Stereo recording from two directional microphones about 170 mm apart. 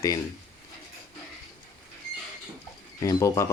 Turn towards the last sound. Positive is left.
turn(degrees=20)  # may be behind; listen again after turning